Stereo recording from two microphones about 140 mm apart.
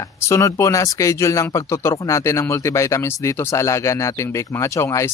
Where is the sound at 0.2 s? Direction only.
20° left (ahead or behind).